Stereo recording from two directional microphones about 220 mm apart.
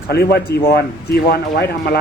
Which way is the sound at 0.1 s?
45° left (ahead or behind).